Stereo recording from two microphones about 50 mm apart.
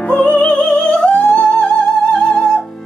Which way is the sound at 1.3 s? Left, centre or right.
Centre.